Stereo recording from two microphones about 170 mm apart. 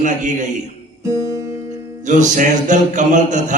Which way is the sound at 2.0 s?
45° right (ahead or behind).